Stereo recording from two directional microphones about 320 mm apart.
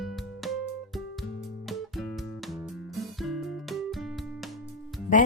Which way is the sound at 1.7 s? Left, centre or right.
Centre.